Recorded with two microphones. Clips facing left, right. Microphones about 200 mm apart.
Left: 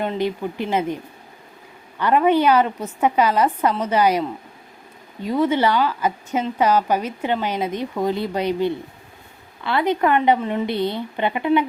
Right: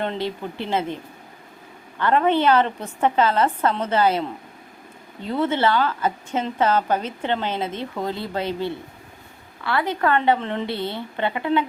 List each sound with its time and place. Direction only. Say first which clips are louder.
0.0 s a woman's voice: left 3 dB; 10° left (ahead or behind)
2.0 s a woman's voice: left 2 dB; 10° left (ahead or behind)